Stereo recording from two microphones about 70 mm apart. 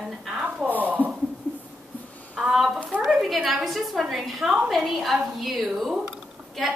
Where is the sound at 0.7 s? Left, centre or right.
Right.